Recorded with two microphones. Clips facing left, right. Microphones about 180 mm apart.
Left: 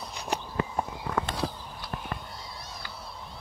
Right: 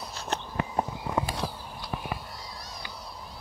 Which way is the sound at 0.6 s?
20° right (ahead or behind).